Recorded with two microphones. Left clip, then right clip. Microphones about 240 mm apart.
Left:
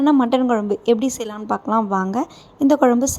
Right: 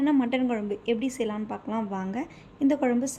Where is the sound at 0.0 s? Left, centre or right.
Left.